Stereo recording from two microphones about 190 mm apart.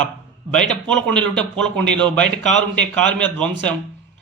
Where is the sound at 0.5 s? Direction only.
5° left (ahead or behind).